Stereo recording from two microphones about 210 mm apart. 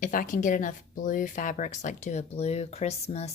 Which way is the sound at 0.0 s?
40° left (ahead or behind).